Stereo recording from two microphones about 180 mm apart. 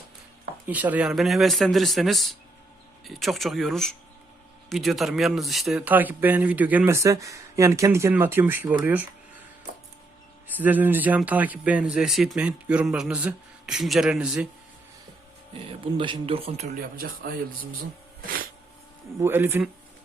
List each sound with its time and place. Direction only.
0.7 s speech: 10° right (ahead or behind)
10.6 s speech: 10° right (ahead or behind)
15.5 s speech: 30° right (ahead or behind); by 17.7 s 50° right (ahead or behind)
19.2 s speech: 10° right (ahead or behind)